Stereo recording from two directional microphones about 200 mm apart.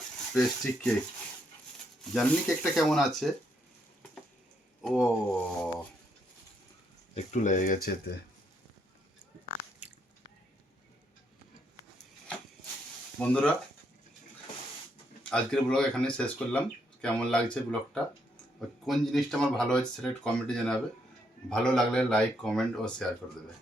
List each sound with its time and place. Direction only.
0.3 s speech: centre (ahead or behind)
2.1 s speech: 5° left (ahead or behind)
4.8 s speech: centre (ahead or behind)
7.1 s speech: 35° left (ahead or behind)
13.1 s speech: 5° left (ahead or behind)
15.2 s speech: 5° left (ahead or behind)